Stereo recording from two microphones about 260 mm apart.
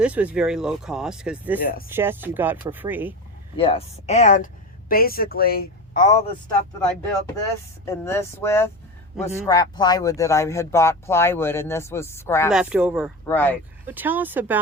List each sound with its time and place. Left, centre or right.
0.0 s speech: centre
3.6 s a woman's voice: left
7.9 s speech: centre
9.2 s speech: centre
9.5 s speech: centre
12.5 s speech: centre
13.2 s speech: centre
13.8 s speech: centre